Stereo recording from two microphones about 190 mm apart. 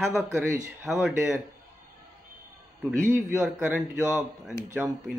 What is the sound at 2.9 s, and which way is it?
Speech, 15° right (ahead or behind).